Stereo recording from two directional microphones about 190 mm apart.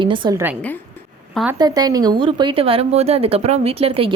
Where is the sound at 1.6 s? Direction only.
20° right (ahead or behind).